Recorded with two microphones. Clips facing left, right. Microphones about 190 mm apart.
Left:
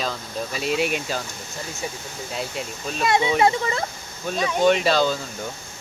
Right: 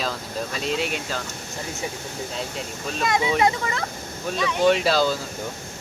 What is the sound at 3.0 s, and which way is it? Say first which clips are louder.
Speech: left 2 dB; 30° left (ahead or behind).